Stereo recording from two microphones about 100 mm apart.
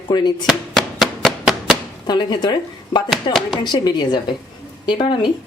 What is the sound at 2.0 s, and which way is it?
Speech, 45° left (ahead or behind).